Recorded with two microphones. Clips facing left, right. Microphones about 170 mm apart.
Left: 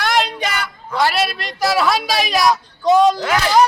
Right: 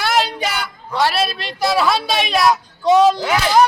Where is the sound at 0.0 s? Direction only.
5° right (ahead or behind).